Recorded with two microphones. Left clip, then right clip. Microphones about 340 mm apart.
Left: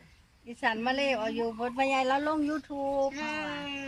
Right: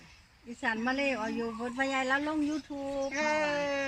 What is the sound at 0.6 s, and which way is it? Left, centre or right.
Speech, left.